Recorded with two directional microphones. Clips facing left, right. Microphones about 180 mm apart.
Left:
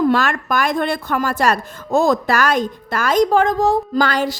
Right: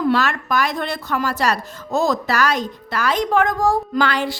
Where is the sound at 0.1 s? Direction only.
50° left (ahead or behind).